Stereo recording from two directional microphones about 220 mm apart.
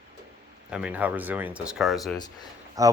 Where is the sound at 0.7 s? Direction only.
5° right (ahead or behind).